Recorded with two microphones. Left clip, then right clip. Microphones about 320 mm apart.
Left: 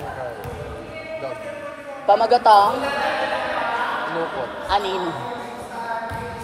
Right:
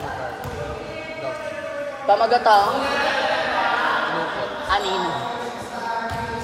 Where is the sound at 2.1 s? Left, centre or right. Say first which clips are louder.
Left 2 dB; left.